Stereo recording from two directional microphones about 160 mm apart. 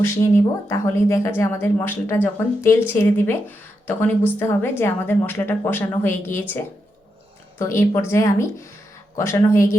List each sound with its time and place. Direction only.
0.0 s speech: 15° left (ahead or behind)
7.6 s speech: 15° left (ahead or behind)